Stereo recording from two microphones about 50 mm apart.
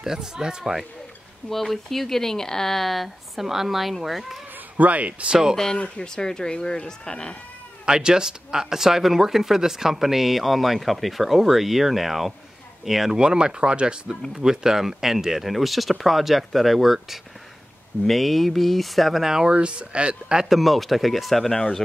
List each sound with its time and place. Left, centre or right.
0.0 s speech: centre
1.5 s speech: centre
4.7 s speech: right
5.8 s speech: centre
7.8 s speech: centre
13.2 s speech: centre
19.5 s speech: right
20.4 s speech: centre